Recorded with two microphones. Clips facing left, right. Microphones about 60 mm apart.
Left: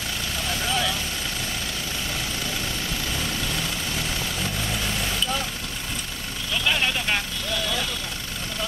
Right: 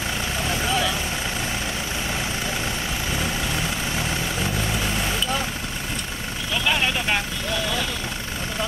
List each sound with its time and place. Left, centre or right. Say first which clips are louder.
0.5 s vehicle: right 2 dB; centre
3.1 s vehicle: right 4 dB; right
6.5 s vehicle: right 1 dB; centre